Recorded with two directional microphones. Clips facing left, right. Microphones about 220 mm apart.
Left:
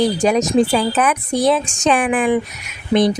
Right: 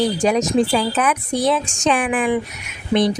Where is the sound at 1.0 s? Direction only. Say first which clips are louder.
Left 3 dB; 45° left (ahead or behind).